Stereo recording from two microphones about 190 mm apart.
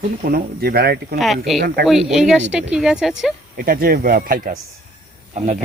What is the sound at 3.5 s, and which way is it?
Speech, 50° right (ahead or behind).